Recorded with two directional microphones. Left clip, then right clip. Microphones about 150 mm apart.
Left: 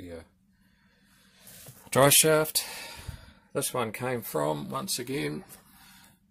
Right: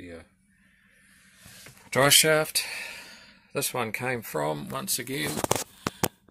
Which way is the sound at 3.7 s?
5° right (ahead or behind).